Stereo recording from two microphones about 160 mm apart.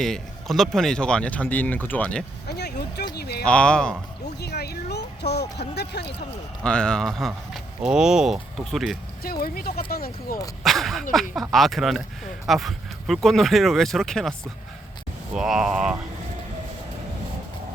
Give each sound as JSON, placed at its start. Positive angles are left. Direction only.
{"t": 0.0, "sound": "speech", "side_deg": 0}
{"t": 2.5, "sound": "vehicle", "side_deg": 90}
{"t": 3.2, "sound": "speech", "side_deg": 90}
{"t": 3.4, "sound": "speech", "side_deg": 5}
{"t": 4.4, "sound": "speech", "side_deg": 90}
{"t": 6.6, "sound": "speech", "side_deg": 5}
{"t": 9.2, "sound": "speech", "side_deg": 70}
{"t": 10.6, "sound": "speech", "side_deg": 0}
{"t": 15.4, "sound": "speech", "side_deg": -5}